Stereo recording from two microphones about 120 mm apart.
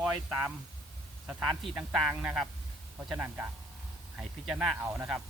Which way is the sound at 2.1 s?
10° right (ahead or behind).